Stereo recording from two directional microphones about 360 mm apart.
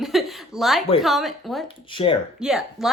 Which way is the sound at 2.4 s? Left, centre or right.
Centre.